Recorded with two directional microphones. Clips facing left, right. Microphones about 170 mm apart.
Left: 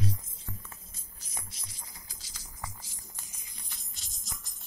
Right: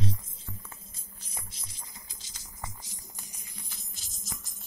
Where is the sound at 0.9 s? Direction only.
25° right (ahead or behind).